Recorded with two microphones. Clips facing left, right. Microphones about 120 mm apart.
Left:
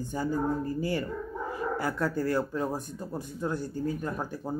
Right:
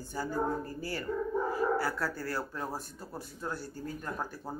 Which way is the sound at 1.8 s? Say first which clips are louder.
Left 5 dB; 20° left (ahead or behind).